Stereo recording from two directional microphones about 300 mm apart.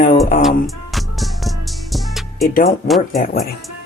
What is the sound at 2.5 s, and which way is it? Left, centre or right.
Speech, left.